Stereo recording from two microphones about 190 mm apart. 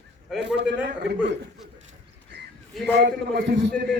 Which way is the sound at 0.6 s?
60° right (ahead or behind).